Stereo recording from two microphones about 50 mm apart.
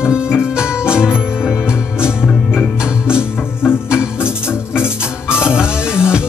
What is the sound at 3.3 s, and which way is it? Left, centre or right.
Music, left.